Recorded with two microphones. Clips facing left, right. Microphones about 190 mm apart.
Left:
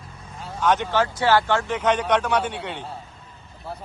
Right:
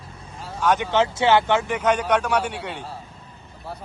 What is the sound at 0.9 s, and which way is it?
A man's voice, 20° right (ahead or behind).